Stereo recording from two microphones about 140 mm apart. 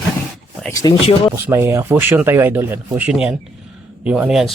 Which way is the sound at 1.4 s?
15° right (ahead or behind).